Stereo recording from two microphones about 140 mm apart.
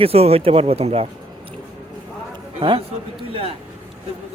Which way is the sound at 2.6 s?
40° right (ahead or behind).